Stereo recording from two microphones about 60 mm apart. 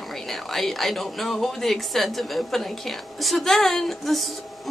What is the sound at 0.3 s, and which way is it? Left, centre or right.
A woman's voice, centre.